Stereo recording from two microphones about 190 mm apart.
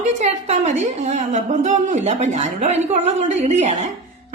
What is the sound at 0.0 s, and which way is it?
A woman's voice, 40° right (ahead or behind).